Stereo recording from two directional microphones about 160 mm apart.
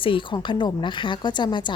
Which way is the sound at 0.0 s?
30° left (ahead or behind).